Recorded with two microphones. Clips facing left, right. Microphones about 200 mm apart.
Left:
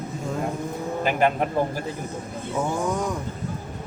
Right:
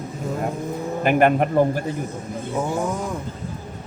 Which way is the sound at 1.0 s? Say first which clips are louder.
Right 5 dB; 60° right (ahead or behind).